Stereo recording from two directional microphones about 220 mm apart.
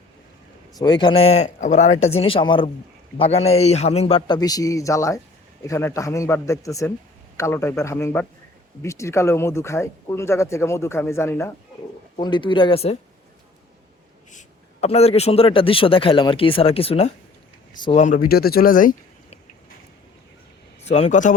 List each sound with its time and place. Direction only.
0.8 s a man's voice: 20° left (ahead or behind)
14.3 s a man's voice: 30° left (ahead or behind)
20.8 s speech: 30° left (ahead or behind)